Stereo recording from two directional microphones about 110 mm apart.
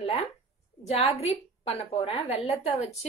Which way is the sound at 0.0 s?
65° left (ahead or behind).